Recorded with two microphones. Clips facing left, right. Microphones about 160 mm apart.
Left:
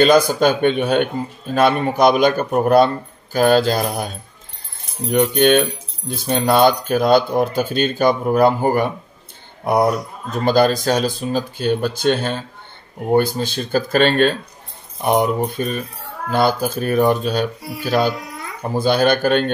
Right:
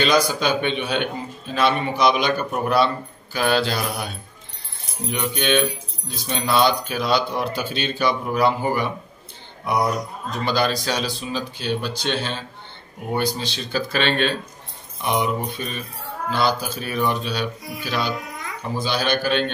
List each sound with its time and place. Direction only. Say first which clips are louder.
0.0 s speech: left 7 dB; 50° left (ahead or behind)